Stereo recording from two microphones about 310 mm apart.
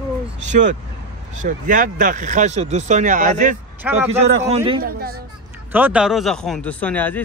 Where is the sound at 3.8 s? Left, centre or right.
Centre.